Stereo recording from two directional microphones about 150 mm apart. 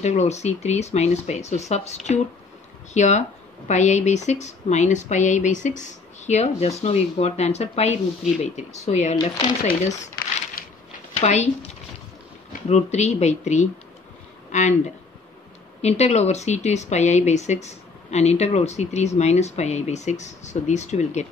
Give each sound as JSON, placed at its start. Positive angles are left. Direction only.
{"t": 0.0, "sound": "speech", "side_deg": 50}
{"t": 9.2, "sound": "speech", "side_deg": 35}
{"t": 9.8, "sound": "crumpling", "side_deg": 50}
{"t": 11.1, "sound": "speech", "side_deg": 50}
{"t": 12.6, "sound": "speech", "side_deg": 45}
{"t": 15.8, "sound": "speech", "side_deg": 45}